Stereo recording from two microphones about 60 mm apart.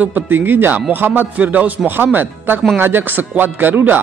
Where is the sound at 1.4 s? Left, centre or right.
Right.